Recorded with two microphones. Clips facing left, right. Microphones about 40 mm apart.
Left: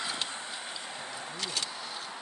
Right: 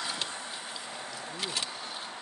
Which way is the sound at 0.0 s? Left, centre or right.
Centre.